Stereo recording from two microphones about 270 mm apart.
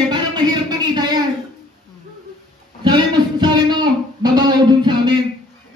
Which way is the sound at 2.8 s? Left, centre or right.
Centre.